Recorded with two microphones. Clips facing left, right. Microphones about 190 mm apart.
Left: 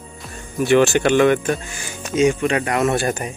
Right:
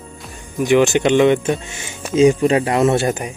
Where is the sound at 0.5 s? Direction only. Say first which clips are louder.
Right 1 dB; 15° right (ahead or behind).